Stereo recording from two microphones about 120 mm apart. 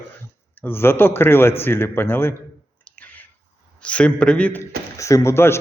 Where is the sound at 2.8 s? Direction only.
10° left (ahead or behind).